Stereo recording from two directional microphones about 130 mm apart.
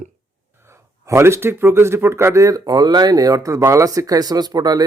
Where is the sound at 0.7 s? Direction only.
20° right (ahead or behind).